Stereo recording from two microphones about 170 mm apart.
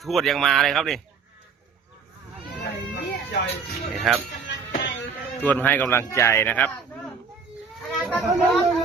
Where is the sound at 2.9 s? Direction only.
90° left.